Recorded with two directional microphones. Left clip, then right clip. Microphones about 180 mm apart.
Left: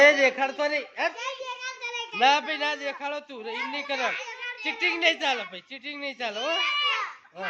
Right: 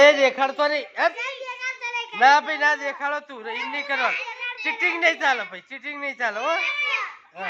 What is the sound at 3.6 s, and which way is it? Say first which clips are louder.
Speech: right 5 dB; 20° left (ahead or behind).